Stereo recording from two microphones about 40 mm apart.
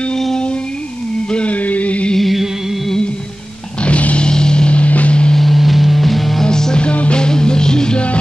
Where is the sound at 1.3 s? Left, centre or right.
Left.